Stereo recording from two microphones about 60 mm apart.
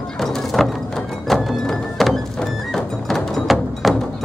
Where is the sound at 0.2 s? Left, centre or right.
Centre.